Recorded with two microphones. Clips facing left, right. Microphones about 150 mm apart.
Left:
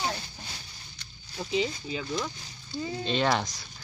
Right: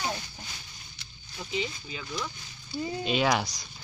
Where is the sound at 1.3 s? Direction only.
35° left (ahead or behind).